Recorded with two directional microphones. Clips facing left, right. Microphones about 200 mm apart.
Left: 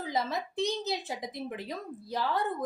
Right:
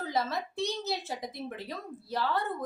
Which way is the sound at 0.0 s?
15° left (ahead or behind).